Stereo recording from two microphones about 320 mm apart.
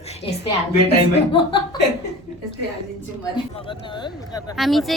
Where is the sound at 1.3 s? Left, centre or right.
Centre.